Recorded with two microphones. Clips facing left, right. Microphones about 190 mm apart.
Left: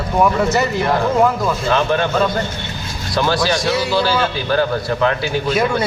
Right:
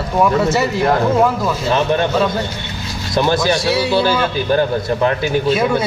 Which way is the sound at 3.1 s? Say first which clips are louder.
Right 2 dB; 20° right (ahead or behind).